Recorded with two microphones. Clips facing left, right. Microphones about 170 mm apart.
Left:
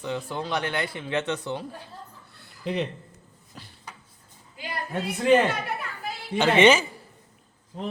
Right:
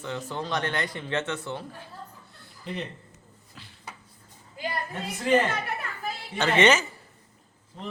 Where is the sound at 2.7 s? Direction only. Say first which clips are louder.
Left 7 dB; 90° left.